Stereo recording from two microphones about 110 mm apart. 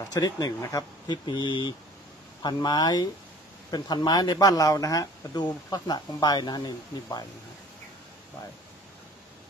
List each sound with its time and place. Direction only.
0.1 s speech: 35° left (ahead or behind)